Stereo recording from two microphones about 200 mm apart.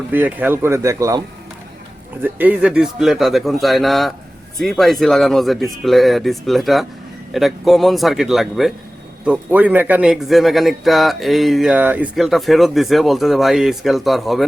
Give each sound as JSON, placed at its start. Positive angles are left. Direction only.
{"t": 0.1, "sound": "speech", "side_deg": -10}
{"t": 2.2, "sound": "speech", "side_deg": -10}